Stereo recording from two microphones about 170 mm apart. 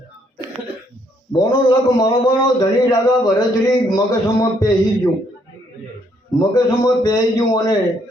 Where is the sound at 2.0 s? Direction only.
25° left (ahead or behind).